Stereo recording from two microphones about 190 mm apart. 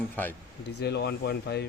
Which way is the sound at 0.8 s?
60° left (ahead or behind).